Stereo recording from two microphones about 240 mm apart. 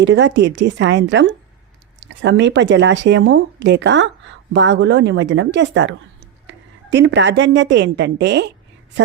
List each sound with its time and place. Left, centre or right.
0.0 s speech: right